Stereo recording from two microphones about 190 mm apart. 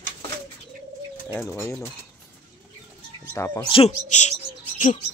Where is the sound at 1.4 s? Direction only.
5° left (ahead or behind).